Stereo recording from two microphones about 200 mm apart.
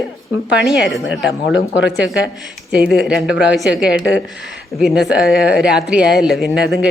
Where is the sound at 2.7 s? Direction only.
Centre (ahead or behind).